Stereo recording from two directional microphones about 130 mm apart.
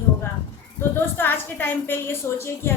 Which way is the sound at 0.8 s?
15° left (ahead or behind).